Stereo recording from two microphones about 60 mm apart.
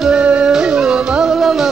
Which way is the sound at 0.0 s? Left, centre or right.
Centre.